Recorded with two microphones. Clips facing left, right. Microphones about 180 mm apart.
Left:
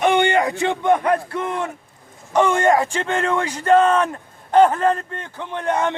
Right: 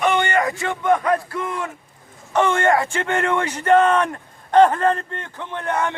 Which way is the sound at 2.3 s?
15° left (ahead or behind).